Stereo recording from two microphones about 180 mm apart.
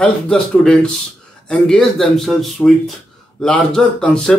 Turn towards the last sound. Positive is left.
turn(degrees=5)  # may be behind; listen again after turning